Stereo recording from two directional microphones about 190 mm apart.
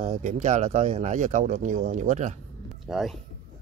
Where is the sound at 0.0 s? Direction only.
40° right (ahead or behind).